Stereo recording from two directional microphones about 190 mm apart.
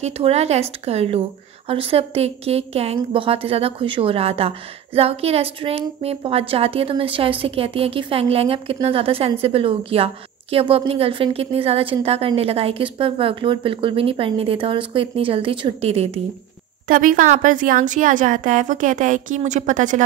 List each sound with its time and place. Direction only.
0.0 s a woman's voice: 35° right (ahead or behind)
16.8 s a woman's voice: 45° right (ahead or behind)